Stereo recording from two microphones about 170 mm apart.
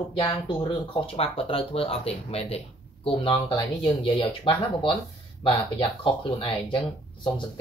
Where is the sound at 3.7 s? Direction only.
30° left (ahead or behind).